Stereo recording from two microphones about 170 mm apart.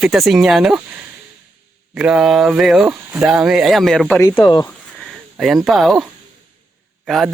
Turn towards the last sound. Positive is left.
turn(degrees=0)  # may be behind; listen again after turning